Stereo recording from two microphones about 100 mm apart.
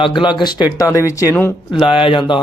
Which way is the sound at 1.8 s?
60° left (ahead or behind).